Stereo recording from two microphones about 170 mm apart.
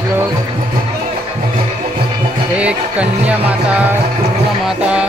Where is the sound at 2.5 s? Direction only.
5° right (ahead or behind).